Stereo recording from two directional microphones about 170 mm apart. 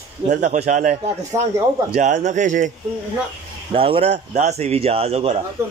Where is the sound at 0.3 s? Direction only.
45° right (ahead or behind).